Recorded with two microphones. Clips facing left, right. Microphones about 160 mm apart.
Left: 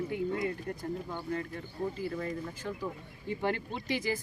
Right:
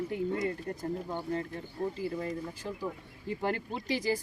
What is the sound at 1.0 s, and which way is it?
Speech, 25° right (ahead or behind).